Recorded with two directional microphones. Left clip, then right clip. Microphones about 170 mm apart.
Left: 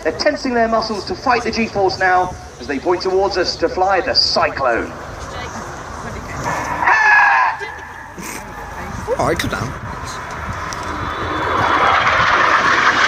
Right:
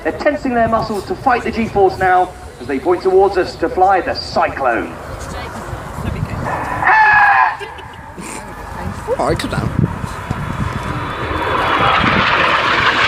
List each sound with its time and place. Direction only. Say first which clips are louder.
0.0 s a man's voice: right 1 dB; 45° left (ahead or behind)
6.8 s a sound: right 2 dB; 40° left (ahead or behind)
9.1 s speech: even; centre (ahead or behind)
11.4 s vehicle: even; 50° right (ahead or behind)
12.5 s vehicle: even; 35° right (ahead or behind)